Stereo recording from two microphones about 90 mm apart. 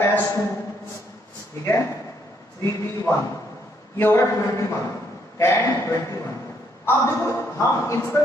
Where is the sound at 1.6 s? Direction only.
25° left (ahead or behind).